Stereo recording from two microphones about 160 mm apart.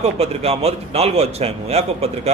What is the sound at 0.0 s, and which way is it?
Speech, 40° right (ahead or behind).